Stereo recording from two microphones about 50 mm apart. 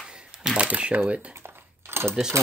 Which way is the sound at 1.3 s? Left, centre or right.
Right.